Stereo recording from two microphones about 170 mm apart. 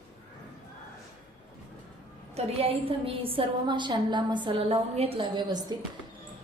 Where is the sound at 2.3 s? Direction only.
35° right (ahead or behind).